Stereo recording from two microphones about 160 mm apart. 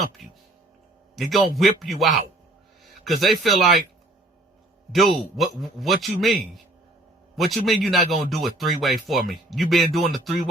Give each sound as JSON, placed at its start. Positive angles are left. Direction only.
{"t": 0.2, "sound": "speech", "side_deg": 0}
{"t": 5.4, "sound": "speech", "side_deg": 0}